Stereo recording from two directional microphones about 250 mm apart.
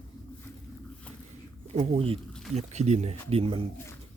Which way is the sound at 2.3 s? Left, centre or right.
Centre.